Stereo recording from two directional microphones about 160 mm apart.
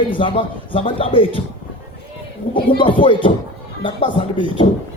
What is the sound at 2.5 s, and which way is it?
A man's voice, 30° left (ahead or behind).